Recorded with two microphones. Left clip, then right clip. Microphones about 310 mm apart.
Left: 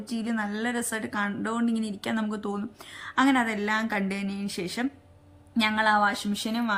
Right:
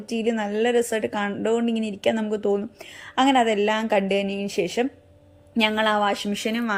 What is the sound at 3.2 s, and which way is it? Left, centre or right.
Speech, centre.